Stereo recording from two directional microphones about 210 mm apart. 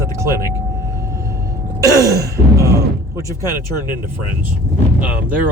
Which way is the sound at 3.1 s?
15° right (ahead or behind).